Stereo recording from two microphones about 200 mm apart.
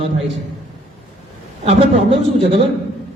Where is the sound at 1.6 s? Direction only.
30° right (ahead or behind).